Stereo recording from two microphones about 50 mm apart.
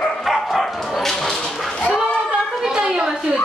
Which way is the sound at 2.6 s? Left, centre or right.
Centre.